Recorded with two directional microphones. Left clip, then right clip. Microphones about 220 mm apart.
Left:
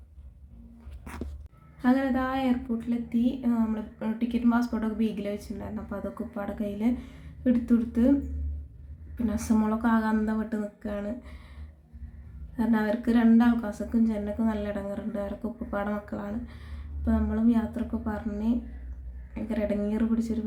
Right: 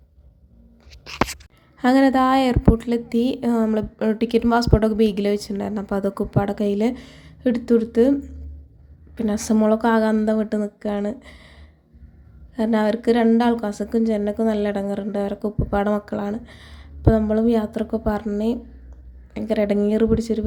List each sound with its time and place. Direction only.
1.8 s a woman's voice: 45° right (ahead or behind)
9.1 s a woman's voice: 35° right (ahead or behind)
12.5 s a woman's voice: 35° right (ahead or behind)